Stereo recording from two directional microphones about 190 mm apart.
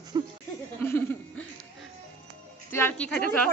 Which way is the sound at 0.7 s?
10° left (ahead or behind).